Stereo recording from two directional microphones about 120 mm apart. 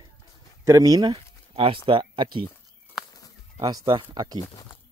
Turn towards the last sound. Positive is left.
turn(degrees=-35)  # may be behind; listen again after turning